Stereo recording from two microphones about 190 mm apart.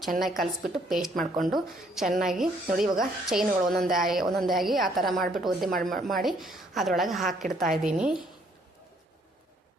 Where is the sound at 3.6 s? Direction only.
50° right (ahead or behind).